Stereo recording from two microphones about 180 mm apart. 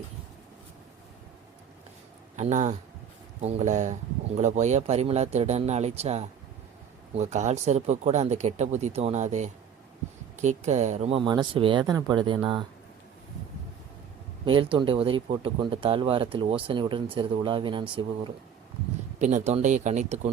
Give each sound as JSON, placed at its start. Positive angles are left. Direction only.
{"t": 2.3, "sound": "speech", "side_deg": -40}
{"t": 14.4, "sound": "speech", "side_deg": -30}
{"t": 19.2, "sound": "speech", "side_deg": -40}